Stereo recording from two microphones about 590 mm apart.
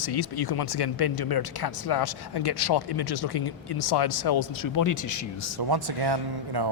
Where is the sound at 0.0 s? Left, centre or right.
Left.